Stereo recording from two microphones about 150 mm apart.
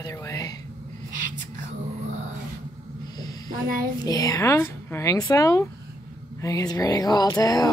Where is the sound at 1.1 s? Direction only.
60° right (ahead or behind).